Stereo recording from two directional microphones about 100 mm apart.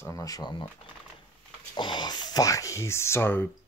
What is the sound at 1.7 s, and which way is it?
Speech, 50° left (ahead or behind).